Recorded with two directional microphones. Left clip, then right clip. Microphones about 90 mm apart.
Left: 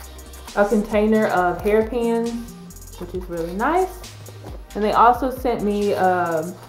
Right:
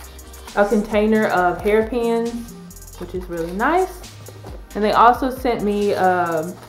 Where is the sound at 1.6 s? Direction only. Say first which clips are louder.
Right 1 dB; 5° right (ahead or behind).